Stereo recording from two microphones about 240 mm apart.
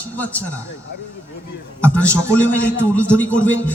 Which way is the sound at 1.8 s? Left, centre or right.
Centre.